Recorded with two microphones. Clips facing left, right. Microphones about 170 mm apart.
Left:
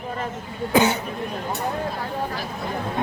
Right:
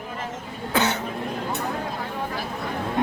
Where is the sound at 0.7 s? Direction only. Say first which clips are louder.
Left 5 dB; 10° left (ahead or behind).